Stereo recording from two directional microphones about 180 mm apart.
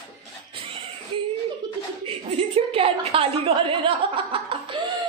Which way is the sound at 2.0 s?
30° right (ahead or behind).